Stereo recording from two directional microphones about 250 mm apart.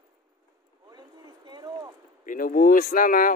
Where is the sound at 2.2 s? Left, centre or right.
Left.